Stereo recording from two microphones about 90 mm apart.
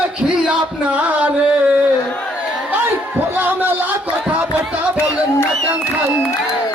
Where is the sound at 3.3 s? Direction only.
25° right (ahead or behind).